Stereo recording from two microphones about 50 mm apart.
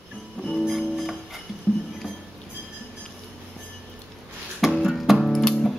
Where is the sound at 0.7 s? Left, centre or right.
Centre.